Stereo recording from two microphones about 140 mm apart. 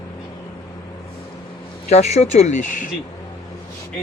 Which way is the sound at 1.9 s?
55° left (ahead or behind).